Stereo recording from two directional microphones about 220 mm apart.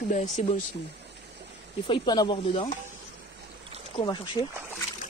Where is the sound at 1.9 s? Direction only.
20° left (ahead or behind).